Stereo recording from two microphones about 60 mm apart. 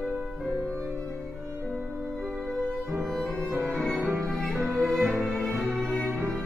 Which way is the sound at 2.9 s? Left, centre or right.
Centre.